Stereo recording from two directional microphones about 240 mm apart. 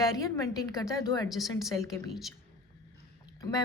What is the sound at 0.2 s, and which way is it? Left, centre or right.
A woman's voice, centre.